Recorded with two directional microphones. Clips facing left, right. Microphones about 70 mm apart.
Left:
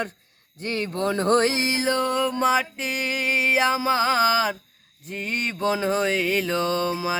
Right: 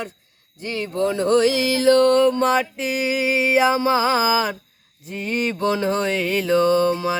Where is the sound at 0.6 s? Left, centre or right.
Left.